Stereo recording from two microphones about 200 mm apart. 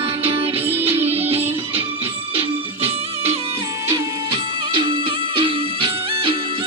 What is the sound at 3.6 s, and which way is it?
Music, 15° right (ahead or behind).